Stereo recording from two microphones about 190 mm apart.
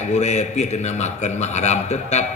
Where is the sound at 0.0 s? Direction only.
35° left (ahead or behind).